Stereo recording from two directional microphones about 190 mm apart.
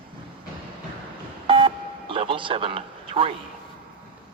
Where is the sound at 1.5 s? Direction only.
30° right (ahead or behind).